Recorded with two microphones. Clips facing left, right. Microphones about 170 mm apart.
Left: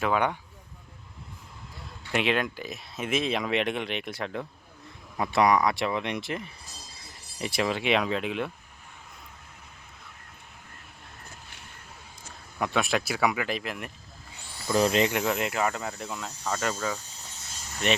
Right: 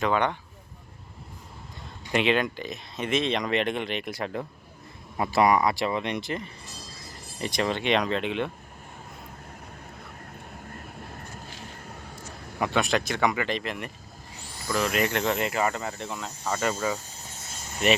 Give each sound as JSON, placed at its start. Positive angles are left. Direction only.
{"t": 0.0, "sound": "speech", "side_deg": 5}
{"t": 2.1, "sound": "speech", "side_deg": 0}
{"t": 12.5, "sound": "speech", "side_deg": 0}
{"t": 14.7, "sound": "speech", "side_deg": 30}
{"t": 15.0, "sound": "speech", "side_deg": 10}